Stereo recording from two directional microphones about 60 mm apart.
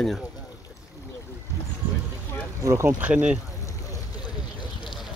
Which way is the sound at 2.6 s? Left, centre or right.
Right.